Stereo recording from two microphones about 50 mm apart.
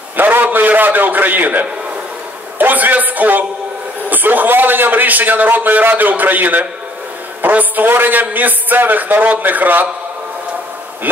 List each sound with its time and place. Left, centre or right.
0.2 s a man's voice: right